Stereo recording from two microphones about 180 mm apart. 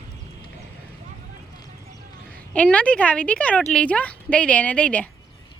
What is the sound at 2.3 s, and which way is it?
A woman's voice, 5° left (ahead or behind).